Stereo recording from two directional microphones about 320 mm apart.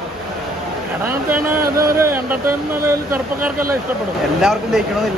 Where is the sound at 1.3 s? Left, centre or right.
Right.